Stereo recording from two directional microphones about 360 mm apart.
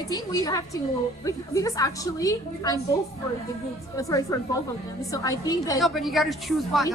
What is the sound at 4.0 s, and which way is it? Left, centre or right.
A woman's voice, centre.